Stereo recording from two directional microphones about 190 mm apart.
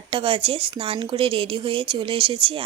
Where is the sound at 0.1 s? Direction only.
30° right (ahead or behind).